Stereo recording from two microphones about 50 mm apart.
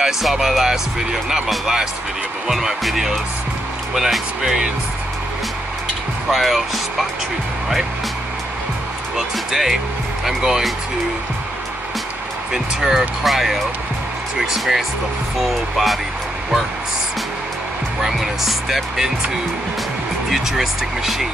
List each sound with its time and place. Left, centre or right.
0.0 s speech: centre
6.3 s speech: centre
9.1 s speech: centre
12.5 s speech: centre
18.0 s speech: centre
20.2 s speech: centre